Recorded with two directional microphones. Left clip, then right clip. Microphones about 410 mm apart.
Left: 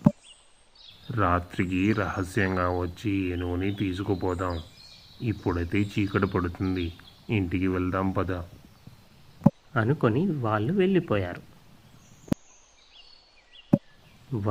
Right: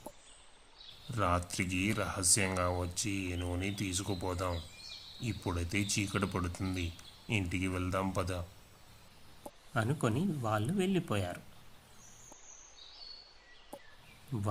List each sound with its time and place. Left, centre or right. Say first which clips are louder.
1.1 s speech: left 7 dB; right
9.7 s speech: left 6 dB; right